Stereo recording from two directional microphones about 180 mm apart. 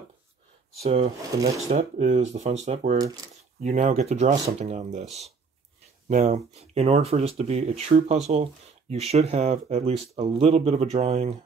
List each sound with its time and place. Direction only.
0.8 s speech: 35° right (ahead or behind)
6.0 s speech: 40° right (ahead or behind)